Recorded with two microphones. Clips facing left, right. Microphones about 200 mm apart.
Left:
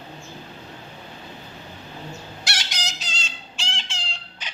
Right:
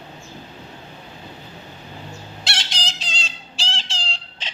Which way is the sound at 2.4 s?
25° right (ahead or behind).